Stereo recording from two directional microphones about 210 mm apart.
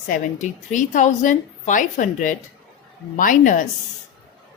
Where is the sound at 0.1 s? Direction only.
35° left (ahead or behind).